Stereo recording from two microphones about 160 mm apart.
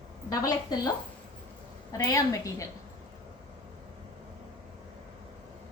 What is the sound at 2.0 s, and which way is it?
Speech, 20° left (ahead or behind).